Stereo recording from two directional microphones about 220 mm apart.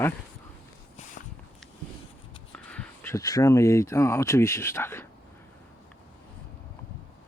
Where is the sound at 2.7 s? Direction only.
10° left (ahead or behind).